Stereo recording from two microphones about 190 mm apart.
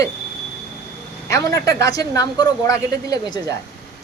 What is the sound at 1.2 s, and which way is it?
Speech, 15° left (ahead or behind).